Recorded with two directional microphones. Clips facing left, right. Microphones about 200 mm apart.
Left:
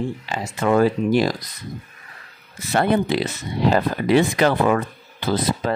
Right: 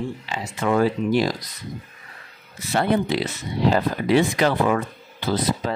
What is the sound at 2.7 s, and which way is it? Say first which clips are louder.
Speech: left 2 dB; 55° left (ahead or behind).